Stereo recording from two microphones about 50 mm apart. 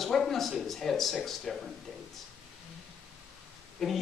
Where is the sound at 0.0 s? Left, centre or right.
Centre.